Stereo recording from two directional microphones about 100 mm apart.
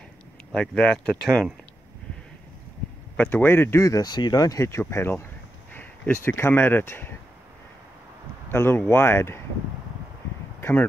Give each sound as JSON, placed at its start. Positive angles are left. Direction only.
{"t": 0.5, "sound": "speech", "side_deg": 5}
{"t": 3.2, "sound": "speech", "side_deg": 15}
{"t": 8.5, "sound": "speech", "side_deg": 25}
{"t": 10.6, "sound": "a sound", "side_deg": 20}